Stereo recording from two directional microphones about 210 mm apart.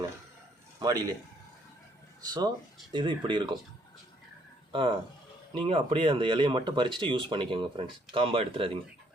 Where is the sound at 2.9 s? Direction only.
20° right (ahead or behind).